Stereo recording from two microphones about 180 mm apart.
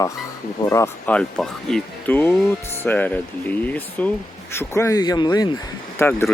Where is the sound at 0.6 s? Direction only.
15° left (ahead or behind).